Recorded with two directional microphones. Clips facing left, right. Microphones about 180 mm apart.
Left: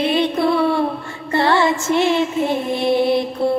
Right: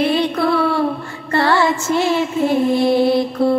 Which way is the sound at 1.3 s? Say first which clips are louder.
Even; 20° left (ahead or behind).